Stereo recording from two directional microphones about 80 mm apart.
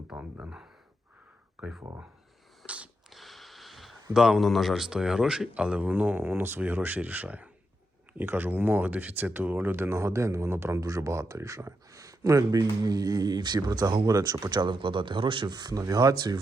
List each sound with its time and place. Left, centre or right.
0.2 s speech: right
1.6 s speech: centre
2.6 s sniff: centre
3.1 s sniff: centre
4.1 s speech: centre; by 10.8 s right
10.8 s speech: right
14.3 s speech: right